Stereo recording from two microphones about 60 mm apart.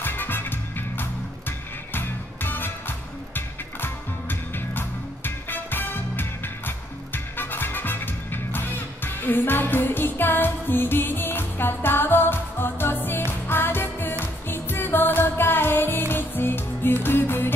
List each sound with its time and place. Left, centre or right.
0.0 s music: left